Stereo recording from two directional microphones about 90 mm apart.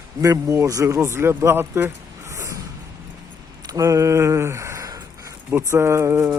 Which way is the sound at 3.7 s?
40° right (ahead or behind).